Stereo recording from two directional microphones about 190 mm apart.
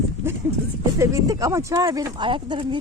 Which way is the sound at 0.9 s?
15° right (ahead or behind).